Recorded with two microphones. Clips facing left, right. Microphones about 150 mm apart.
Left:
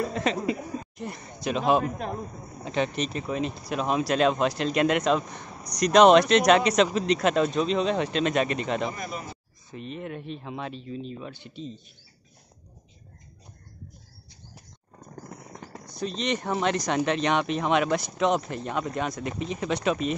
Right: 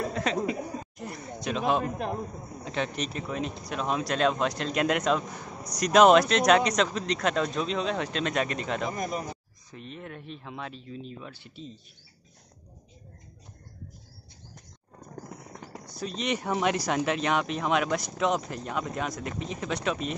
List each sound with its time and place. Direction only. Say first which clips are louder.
0.1 s speech: left 2 dB; centre (ahead or behind)
8.9 s speech: right 4 dB; 40° right (ahead or behind)
9.7 s speech: left 6 dB; centre (ahead or behind)
15.2 s speech: left 1 dB; 5° right (ahead or behind)